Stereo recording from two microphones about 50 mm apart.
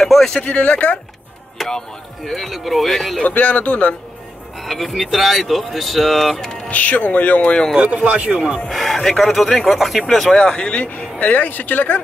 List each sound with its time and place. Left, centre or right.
0.0 s speech: centre
0.4 s speech: left
1.6 s speech: centre
2.3 s speech: centre
3.3 s speech: left
4.6 s speech: centre
6.3 s a sound: centre
6.7 s speech: left
8.1 s a man's voice: right
8.6 s speech: centre
10.3 s speech: centre; by 12.0 s left